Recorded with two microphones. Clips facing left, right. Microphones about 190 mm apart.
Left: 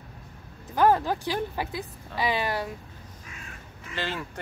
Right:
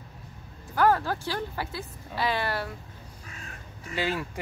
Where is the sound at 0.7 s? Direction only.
20° left (ahead or behind).